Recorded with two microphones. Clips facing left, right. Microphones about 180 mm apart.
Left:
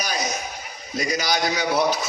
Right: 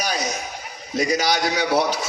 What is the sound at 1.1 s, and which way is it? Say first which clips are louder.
Speech: right 1 dB; 35° right (ahead or behind).